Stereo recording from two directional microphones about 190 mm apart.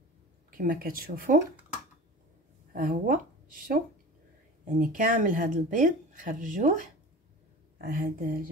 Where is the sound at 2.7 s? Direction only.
50° right (ahead or behind).